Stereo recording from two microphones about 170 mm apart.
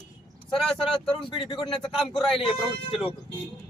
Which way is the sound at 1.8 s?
5° left (ahead or behind).